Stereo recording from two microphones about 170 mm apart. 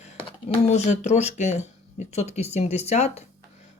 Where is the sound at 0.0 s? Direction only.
35° left (ahead or behind).